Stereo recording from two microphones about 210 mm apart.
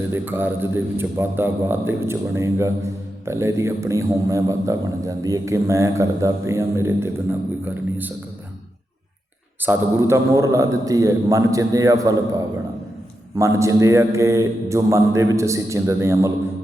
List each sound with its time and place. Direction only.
0.1 s a man's voice: 10° right (ahead or behind)
9.6 s a man's voice: 15° right (ahead or behind)